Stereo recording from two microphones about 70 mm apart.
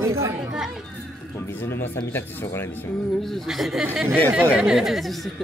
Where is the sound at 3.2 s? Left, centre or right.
Centre.